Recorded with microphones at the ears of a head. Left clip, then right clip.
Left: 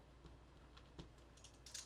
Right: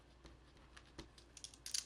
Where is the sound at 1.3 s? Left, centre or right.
Right.